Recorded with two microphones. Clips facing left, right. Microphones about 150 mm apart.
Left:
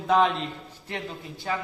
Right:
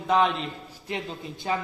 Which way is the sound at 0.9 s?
20° right (ahead or behind).